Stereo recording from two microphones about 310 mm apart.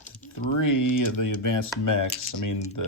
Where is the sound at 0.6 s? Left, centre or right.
Left.